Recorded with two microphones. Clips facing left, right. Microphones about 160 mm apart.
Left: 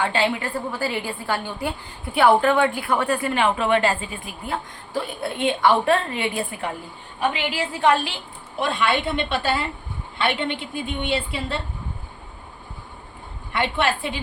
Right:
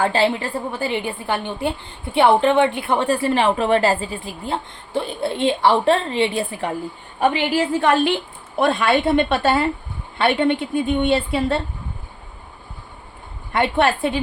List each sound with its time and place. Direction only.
0.0 s a woman's voice: 35° right (ahead or behind)
7.2 s a woman's voice: 45° right (ahead or behind)
13.5 s a woman's voice: 50° right (ahead or behind)